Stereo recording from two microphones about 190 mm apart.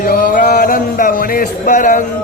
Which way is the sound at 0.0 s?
45° left (ahead or behind).